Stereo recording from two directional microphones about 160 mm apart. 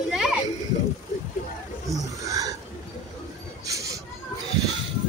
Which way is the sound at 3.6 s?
20° right (ahead or behind).